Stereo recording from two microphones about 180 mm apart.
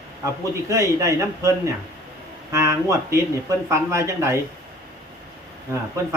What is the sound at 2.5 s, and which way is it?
Speech, 15° right (ahead or behind).